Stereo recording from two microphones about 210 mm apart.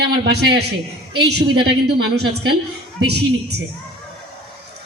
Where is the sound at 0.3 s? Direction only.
50° right (ahead or behind).